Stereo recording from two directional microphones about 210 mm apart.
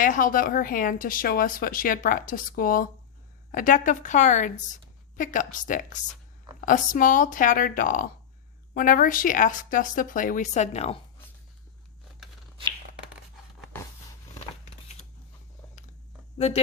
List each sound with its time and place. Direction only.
0.0 s speech: 40° left (ahead or behind)